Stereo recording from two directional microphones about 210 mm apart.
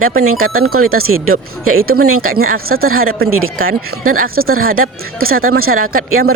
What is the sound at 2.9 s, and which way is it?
Speech, 80° right.